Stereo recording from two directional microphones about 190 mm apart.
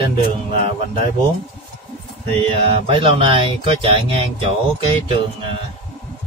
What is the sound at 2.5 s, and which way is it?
Speech, 30° right (ahead or behind).